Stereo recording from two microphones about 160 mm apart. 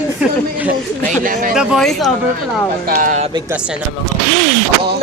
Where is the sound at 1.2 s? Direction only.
60° right (ahead or behind).